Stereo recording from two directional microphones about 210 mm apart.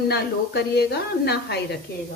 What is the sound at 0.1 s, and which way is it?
A woman's voice, 50° left (ahead or behind).